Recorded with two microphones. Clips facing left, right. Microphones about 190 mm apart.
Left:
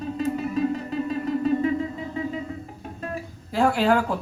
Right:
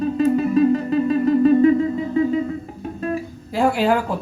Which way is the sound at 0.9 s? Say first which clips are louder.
Right 9 dB; 75° right (ahead or behind).